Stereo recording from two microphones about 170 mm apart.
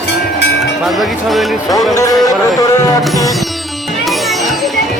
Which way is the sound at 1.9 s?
20° left (ahead or behind).